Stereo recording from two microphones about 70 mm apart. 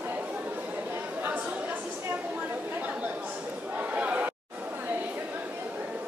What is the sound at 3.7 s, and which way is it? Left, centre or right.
Chatter, right.